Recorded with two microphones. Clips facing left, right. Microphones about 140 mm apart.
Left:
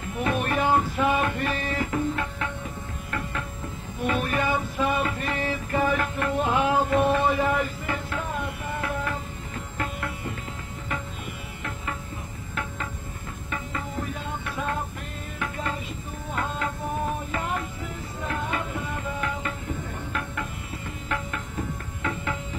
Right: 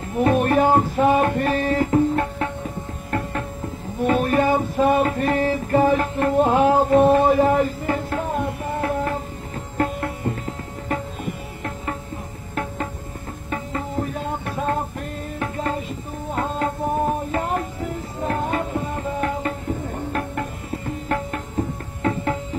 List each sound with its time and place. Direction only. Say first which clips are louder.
0.2 s music: right 8 dB; 40° right (ahead or behind)
13.5 s music: right 6 dB; 35° right (ahead or behind)